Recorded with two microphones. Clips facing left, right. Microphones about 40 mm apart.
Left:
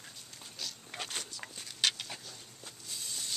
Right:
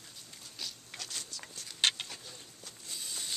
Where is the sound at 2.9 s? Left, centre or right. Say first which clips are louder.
Even; centre.